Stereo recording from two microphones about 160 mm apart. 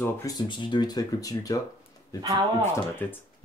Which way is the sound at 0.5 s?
30° left (ahead or behind).